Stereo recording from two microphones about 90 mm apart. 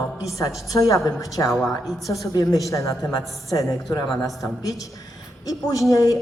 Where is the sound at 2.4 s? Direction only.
40° left (ahead or behind).